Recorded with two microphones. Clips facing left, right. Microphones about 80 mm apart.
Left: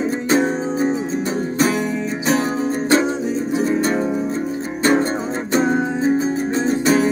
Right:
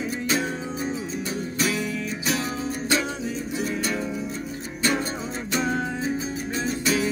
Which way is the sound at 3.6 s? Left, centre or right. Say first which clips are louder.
Left 8 dB; left.